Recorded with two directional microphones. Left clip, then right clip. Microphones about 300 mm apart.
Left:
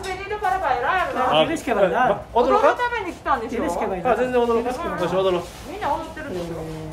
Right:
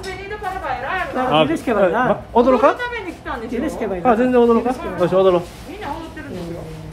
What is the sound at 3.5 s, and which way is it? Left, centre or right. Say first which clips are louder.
Speech: right 1 dB; centre.